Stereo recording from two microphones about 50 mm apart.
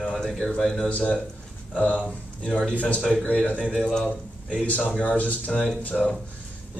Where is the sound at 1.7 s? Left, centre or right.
Left.